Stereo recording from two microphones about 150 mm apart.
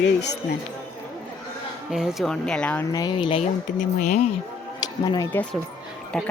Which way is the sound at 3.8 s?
55° left (ahead or behind).